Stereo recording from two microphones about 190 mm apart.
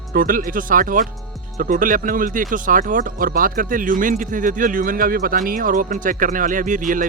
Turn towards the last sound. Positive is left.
turn(degrees=-45)  # may be behind; listen again after turning